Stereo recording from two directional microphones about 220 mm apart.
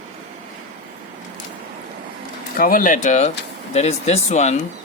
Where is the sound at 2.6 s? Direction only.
40° left (ahead or behind).